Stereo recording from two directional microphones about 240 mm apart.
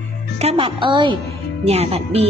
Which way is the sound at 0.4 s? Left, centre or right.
Right.